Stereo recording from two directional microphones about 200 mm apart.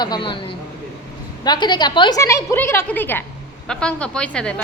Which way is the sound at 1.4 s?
20° left (ahead or behind).